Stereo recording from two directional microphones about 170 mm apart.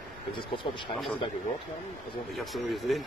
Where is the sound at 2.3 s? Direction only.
Centre (ahead or behind).